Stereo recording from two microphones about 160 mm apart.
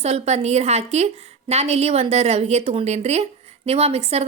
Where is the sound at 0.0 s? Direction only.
40° right (ahead or behind).